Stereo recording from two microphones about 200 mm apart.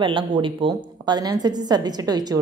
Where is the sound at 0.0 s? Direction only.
25° right (ahead or behind).